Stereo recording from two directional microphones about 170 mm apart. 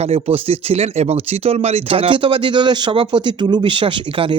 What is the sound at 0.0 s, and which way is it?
Speech, 35° right (ahead or behind).